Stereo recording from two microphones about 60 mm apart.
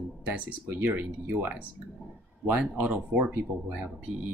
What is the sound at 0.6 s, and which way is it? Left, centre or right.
Speech, right.